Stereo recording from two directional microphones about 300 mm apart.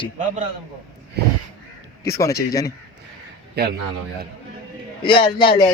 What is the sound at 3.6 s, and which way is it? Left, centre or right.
Speech, right.